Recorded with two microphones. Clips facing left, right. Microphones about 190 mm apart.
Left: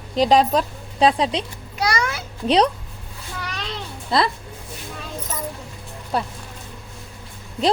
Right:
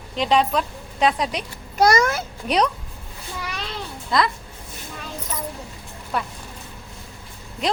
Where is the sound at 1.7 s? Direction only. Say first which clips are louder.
Right 6 dB; 45° right (ahead or behind).